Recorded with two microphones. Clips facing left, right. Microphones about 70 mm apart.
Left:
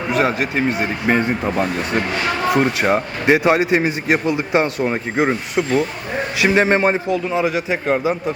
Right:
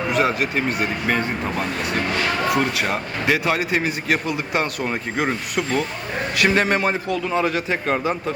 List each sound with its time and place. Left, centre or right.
0.1 s speech: left
7.3 s a man's voice: centre